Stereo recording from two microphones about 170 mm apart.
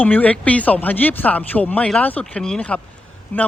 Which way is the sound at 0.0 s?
10° left (ahead or behind).